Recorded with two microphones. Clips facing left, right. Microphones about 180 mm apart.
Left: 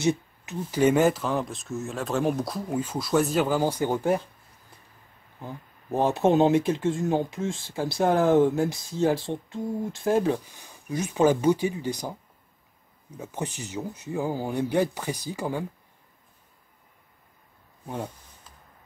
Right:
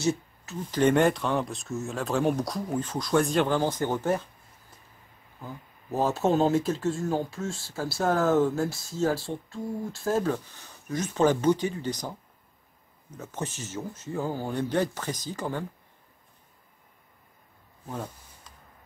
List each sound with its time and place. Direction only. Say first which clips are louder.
0.0 s speech: left 2 dB; 15° left (ahead or behind)
5.4 s speech: left 2 dB; 20° left (ahead or behind)
13.2 s speech: left 2 dB; 15° left (ahead or behind)
17.8 s speech: left 2 dB; 10° left (ahead or behind)